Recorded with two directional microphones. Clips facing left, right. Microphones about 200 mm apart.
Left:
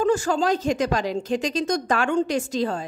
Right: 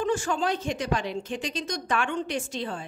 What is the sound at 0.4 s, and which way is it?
Speech, 90° left.